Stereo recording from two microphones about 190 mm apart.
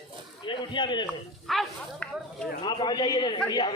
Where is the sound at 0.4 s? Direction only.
25° left (ahead or behind).